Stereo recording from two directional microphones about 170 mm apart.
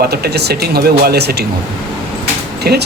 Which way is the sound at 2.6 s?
70° right (ahead or behind).